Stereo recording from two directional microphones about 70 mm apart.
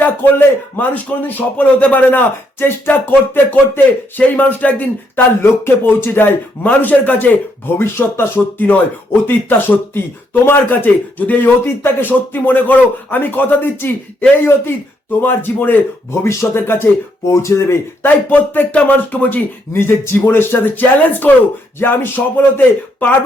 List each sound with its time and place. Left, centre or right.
0.0 s a man's voice: left
7.8 s speech: left
8.5 s a man's voice: left
16.2 s speech: left
18.0 s a man's voice: left
19.9 s a man's voice: left